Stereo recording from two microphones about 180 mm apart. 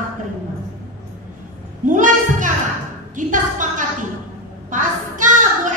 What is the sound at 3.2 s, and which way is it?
Speech, 45° right (ahead or behind).